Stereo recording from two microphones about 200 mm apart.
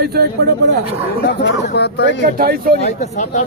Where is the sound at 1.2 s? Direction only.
55° left (ahead or behind).